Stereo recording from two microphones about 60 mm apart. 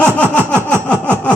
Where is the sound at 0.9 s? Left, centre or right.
Right.